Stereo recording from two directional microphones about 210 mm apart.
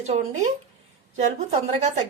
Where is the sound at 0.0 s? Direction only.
30° right (ahead or behind).